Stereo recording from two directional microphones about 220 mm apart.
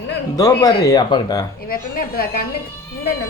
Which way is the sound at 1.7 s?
40° left (ahead or behind).